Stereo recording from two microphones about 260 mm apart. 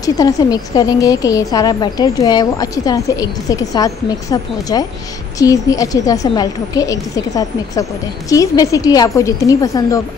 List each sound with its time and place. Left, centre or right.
0.0 s a woman's voice: centre